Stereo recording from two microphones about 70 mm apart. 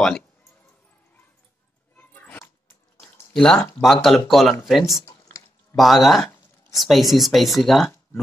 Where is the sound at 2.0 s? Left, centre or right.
Left.